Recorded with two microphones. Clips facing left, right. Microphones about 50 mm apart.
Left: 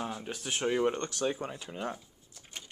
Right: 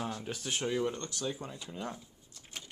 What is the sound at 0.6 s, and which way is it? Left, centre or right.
Speech, left.